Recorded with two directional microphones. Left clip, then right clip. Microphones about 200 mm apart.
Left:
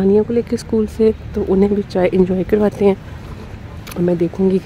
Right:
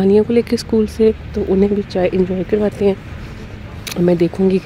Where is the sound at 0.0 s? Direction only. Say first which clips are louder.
Right 2 dB; 10° right (ahead or behind).